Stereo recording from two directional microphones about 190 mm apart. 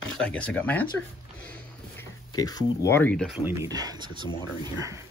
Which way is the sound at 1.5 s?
15° left (ahead or behind).